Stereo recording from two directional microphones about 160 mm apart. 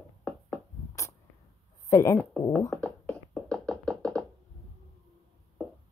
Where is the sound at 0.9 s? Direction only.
20° left (ahead or behind).